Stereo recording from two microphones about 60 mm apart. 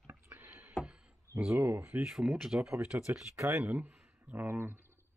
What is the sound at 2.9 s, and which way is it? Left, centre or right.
Speech, right.